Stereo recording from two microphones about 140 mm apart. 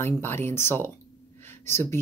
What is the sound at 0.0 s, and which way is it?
Speech, 15° left (ahead or behind).